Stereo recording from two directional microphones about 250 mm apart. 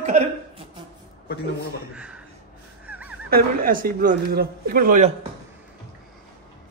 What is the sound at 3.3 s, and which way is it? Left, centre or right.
A man's voice, right.